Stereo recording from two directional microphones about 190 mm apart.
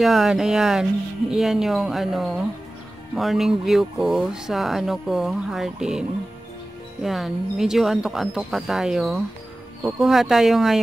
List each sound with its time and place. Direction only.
0.0 s speech: centre (ahead or behind)